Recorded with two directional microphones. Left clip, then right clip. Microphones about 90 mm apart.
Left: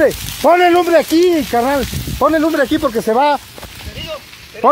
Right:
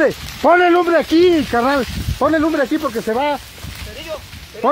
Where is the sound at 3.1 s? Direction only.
90° left.